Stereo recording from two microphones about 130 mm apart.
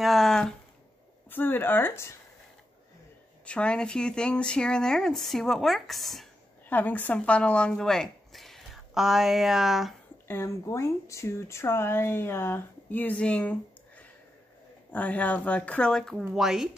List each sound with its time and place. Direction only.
0.0 s a sound: centre (ahead or behind)
1.3 s speech: 15° left (ahead or behind)
3.4 s speech: 10° left (ahead or behind)
6.7 s speech: 15° left (ahead or behind); by 9.9 s centre (ahead or behind)
10.2 s speech: 20° left (ahead or behind); by 16.7 s centre (ahead or behind)